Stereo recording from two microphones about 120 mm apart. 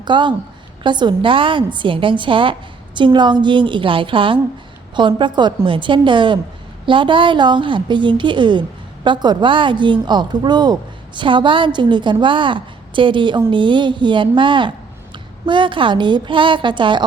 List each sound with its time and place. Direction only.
0.0 s a woman's voice: 40° right (ahead or behind)